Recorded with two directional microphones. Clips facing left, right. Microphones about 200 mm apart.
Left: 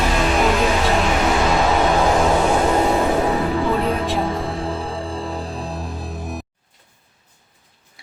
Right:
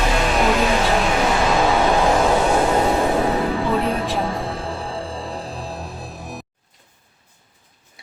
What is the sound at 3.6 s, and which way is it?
Music, centre (ahead or behind).